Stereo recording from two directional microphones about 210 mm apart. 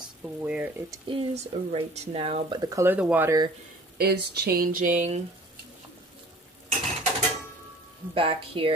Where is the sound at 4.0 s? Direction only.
50° right (ahead or behind).